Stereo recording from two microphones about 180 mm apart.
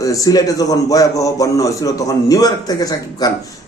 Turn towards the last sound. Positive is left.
turn(degrees=20)  # may be behind; listen again after turning